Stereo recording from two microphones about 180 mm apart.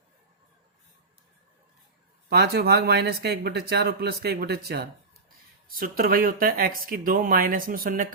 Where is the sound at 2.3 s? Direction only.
60° right (ahead or behind).